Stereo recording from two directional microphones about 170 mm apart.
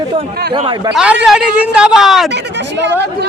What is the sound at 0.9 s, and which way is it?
A man's voice, 5° right (ahead or behind).